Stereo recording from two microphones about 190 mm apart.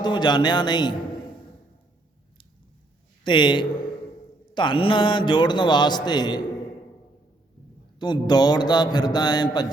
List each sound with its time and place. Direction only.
0.0 s a man's voice: 20° left (ahead or behind)
3.2 s a man's voice: 25° left (ahead or behind)
7.9 s a man's voice: 20° left (ahead or behind)